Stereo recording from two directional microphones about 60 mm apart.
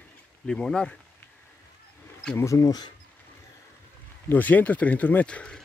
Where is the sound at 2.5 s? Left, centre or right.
Left.